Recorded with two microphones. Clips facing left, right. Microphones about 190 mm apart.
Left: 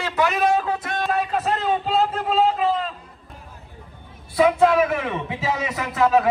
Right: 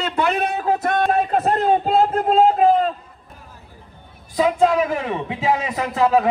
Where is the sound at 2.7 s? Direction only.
55° right (ahead or behind).